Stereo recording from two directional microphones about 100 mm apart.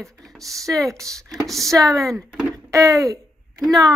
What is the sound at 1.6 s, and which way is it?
Child singing, 35° right (ahead or behind).